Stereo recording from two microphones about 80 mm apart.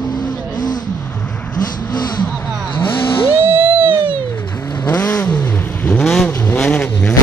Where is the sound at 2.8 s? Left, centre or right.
Left.